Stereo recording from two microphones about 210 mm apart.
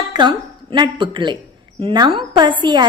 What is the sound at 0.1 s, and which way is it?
A woman's voice, 20° right (ahead or behind).